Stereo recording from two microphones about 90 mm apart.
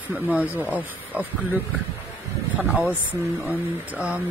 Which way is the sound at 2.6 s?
15° right (ahead or behind).